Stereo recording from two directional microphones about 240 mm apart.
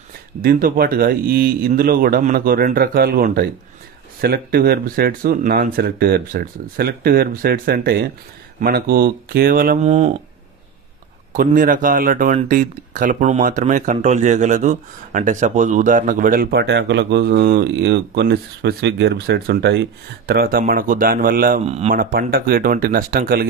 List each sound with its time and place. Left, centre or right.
0.4 s speech: right
11.3 s speech: right